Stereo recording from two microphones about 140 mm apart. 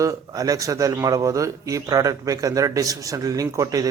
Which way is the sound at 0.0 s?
25° right (ahead or behind).